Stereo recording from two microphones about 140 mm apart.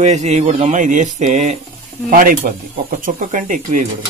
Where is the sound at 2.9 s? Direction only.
70° right (ahead or behind).